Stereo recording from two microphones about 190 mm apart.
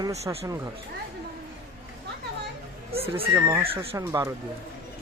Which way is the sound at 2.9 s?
30° right (ahead or behind).